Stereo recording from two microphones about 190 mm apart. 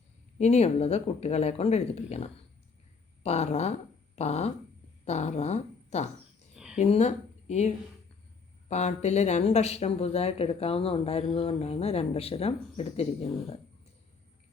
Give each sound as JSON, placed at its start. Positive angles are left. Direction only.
{"t": 0.3, "sound": "a woman's voice", "side_deg": 35}
{"t": 8.7, "sound": "speech", "side_deg": 35}